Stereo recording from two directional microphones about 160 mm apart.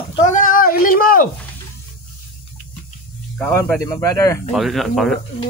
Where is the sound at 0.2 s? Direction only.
55° left (ahead or behind).